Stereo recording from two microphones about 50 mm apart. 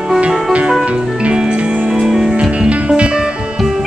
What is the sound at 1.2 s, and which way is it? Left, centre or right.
Music, centre.